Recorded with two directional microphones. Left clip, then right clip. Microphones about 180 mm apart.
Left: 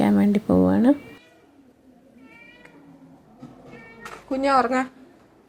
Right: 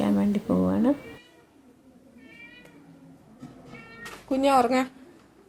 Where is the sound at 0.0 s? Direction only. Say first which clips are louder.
Left 5 dB; 30° left (ahead or behind).